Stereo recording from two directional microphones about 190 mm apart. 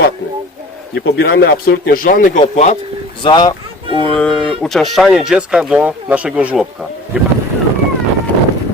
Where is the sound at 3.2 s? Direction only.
25° left (ahead or behind).